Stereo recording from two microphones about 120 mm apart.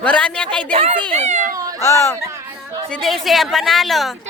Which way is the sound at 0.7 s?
60° right (ahead or behind).